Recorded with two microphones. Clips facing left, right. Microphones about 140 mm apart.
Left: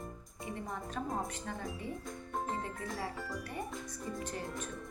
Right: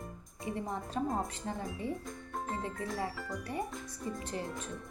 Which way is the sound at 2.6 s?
25° right (ahead or behind).